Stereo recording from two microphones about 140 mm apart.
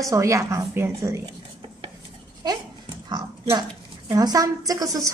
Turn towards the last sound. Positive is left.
turn(degrees=-25)  # may be behind; listen again after turning